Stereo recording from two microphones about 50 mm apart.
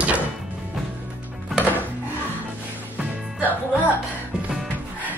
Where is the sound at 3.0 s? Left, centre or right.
Right.